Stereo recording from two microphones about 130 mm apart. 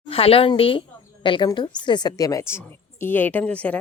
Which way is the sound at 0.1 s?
45° left (ahead or behind).